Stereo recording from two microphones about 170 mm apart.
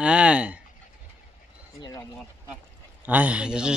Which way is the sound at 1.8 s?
20° left (ahead or behind).